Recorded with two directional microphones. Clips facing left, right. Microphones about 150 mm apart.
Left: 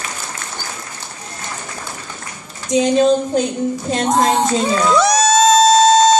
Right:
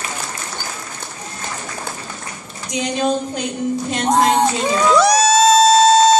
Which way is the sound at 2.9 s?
35° left (ahead or behind).